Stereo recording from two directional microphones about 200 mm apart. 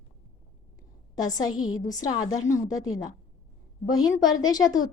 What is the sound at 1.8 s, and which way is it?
Speech, 20° left (ahead or behind).